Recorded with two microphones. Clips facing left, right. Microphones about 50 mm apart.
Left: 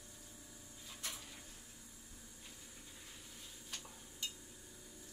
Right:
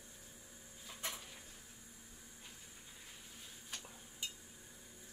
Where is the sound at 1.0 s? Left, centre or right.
Right.